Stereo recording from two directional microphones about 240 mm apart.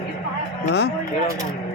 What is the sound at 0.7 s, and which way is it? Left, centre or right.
Speech, left.